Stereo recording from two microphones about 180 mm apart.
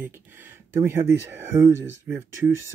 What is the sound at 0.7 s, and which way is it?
Speech, 15° right (ahead or behind).